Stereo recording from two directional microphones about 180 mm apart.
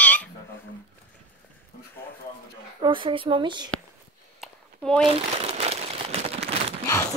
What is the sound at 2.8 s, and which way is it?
Speech, 25° right (ahead or behind).